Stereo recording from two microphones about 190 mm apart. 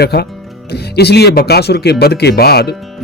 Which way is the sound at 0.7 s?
60° left (ahead or behind).